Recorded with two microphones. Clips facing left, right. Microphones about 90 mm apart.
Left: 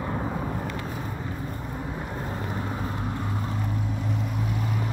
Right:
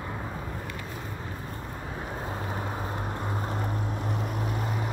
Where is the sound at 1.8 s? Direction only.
5° right (ahead or behind).